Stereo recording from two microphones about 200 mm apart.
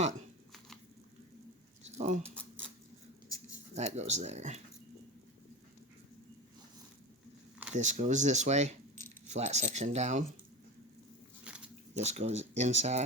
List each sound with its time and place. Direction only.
2.0 s speech: 35° right (ahead or behind)
3.8 s speech: 35° right (ahead or behind)
7.7 s speech: 35° right (ahead or behind)
11.5 s dog: 5° right (ahead or behind)
11.9 s speech: 35° right (ahead or behind)